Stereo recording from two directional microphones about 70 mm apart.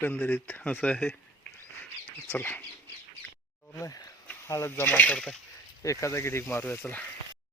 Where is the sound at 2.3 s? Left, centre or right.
Left.